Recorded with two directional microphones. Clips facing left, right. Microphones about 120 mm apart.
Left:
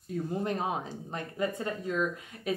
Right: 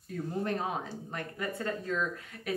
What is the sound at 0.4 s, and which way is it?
A woman's voice, 20° left (ahead or behind).